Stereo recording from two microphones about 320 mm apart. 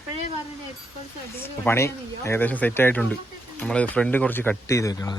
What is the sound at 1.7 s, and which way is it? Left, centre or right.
Speech, centre.